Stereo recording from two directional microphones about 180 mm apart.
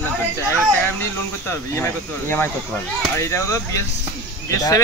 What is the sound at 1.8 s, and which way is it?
Speech, 10° left (ahead or behind).